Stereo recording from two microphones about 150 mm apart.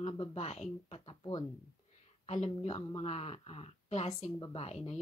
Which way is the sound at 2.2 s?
45° left (ahead or behind).